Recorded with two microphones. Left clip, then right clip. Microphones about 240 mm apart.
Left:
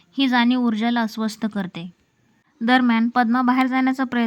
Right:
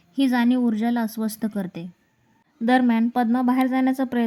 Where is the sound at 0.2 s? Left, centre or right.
Centre.